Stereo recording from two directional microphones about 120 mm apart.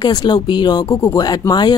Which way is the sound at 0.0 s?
35° left (ahead or behind).